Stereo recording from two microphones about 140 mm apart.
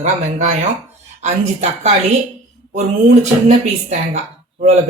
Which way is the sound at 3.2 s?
55° right (ahead or behind).